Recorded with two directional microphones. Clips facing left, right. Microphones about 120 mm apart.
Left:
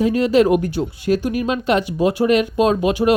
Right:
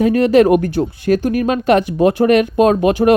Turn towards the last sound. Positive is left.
turn(degrees=-50)  # may be behind; listen again after turning